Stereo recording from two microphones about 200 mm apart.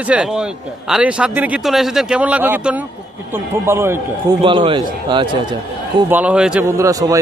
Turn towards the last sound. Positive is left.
turn(degrees=-15)  # may be behind; listen again after turning